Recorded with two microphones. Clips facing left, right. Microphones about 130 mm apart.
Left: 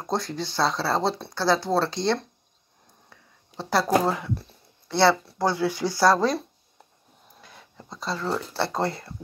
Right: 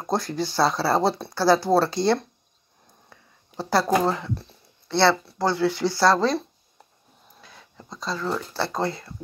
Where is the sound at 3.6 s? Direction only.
Centre (ahead or behind).